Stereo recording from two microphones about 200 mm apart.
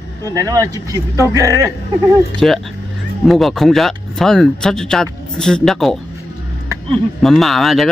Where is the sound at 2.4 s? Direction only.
5° left (ahead or behind).